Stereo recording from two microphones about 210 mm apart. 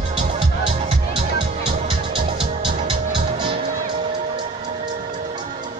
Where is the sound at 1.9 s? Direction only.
25° right (ahead or behind).